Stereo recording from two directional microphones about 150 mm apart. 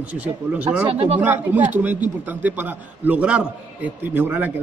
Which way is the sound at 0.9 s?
45° right (ahead or behind).